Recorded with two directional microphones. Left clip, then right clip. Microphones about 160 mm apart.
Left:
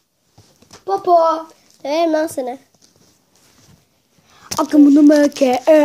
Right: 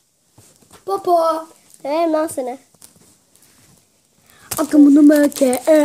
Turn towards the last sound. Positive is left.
turn(degrees=-15)  # may be behind; listen again after turning